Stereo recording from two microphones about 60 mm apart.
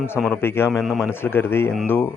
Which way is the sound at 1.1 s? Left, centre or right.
Left.